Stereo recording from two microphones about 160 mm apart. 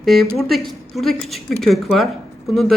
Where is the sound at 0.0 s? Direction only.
Centre (ahead or behind).